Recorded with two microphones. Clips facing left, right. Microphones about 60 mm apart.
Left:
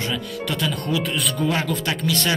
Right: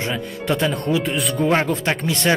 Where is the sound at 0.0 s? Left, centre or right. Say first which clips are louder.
Right 1 dB; right.